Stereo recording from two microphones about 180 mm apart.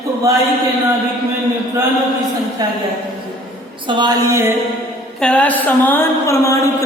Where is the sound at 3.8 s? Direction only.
25° right (ahead or behind).